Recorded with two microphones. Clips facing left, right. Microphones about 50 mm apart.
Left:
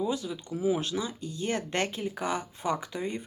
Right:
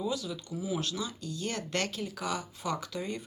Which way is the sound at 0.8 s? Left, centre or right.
Left.